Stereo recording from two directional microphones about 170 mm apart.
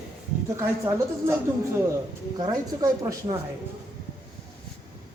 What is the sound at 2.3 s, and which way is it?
Speech, 25° right (ahead or behind).